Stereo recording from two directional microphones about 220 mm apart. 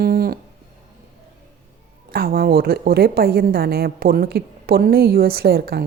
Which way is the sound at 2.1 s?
40° right (ahead or behind).